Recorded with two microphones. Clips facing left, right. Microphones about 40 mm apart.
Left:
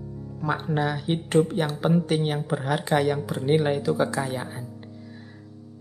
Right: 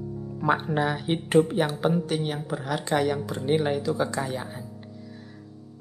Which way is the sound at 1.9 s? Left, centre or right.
Left.